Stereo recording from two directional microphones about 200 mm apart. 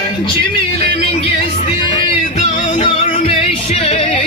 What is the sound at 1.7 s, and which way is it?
Music, 25° left (ahead or behind).